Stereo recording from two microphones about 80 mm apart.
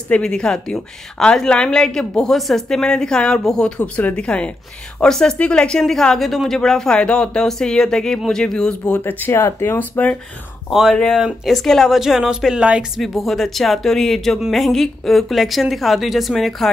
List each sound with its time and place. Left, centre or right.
0.1 s a woman's voice: centre
8.8 s speech: left
11.1 s a woman's voice: centre
13.0 s a woman's voice: centre